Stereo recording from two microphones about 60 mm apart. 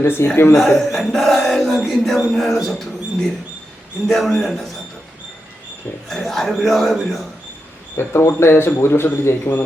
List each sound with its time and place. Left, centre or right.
0.0 s speech: left
0.5 s speech: centre
4.0 s speech: centre
6.1 s speech: centre
7.9 s speech: left